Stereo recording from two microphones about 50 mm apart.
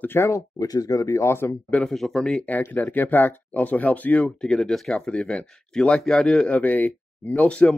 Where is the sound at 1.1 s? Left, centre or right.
Left.